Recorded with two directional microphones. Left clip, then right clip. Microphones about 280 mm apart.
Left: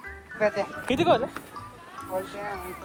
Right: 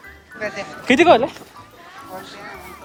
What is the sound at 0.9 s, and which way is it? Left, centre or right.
Speech, right.